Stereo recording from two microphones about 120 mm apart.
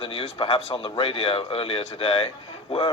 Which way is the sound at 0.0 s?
50° left (ahead or behind).